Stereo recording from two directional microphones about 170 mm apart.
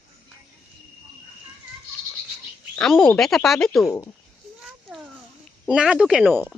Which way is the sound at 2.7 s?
Centre (ahead or behind).